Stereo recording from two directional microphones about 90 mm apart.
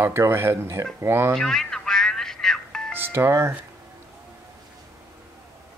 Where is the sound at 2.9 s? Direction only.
25° right (ahead or behind).